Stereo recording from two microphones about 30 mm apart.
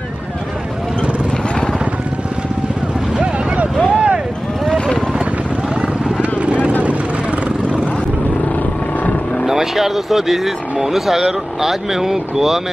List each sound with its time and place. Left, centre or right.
3.9 s vehicle: right
6.3 s vehicle: right
9.5 s speech: centre